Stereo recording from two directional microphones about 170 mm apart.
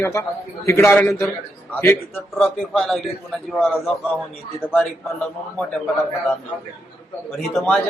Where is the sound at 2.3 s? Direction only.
Centre (ahead or behind).